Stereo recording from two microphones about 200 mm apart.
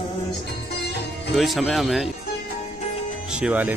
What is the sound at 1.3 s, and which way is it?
Speech, centre (ahead or behind).